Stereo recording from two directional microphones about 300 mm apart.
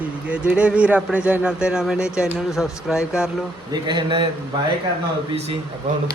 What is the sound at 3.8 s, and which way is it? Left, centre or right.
Speech, centre.